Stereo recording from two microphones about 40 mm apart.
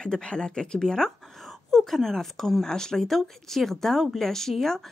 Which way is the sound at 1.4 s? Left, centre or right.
Centre.